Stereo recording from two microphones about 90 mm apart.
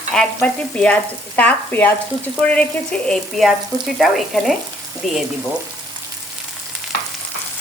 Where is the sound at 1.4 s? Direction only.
20° left (ahead or behind).